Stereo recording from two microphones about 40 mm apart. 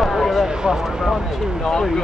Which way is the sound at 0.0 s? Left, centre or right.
Centre.